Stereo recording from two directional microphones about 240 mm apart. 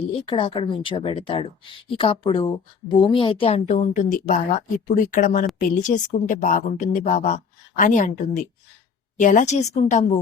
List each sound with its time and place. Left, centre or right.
0.1 s a woman's voice: left